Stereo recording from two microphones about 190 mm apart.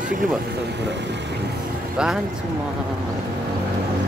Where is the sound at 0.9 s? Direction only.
65° right (ahead or behind).